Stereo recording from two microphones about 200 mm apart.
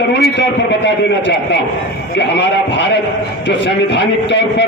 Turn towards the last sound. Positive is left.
turn(degrees=60)  # may be behind; listen again after turning